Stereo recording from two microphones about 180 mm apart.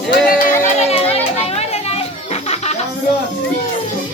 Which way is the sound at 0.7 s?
35° left (ahead or behind).